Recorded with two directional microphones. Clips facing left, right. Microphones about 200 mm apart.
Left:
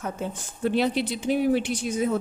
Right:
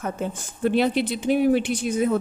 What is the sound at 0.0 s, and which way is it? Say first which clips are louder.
Speech: right 3 dB; 55° right (ahead or behind).